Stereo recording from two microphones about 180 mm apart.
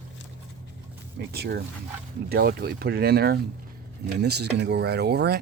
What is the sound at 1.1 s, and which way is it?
Speech, 65° right (ahead or behind).